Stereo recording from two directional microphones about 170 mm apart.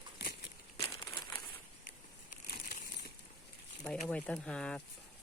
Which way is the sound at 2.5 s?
60° left (ahead or behind).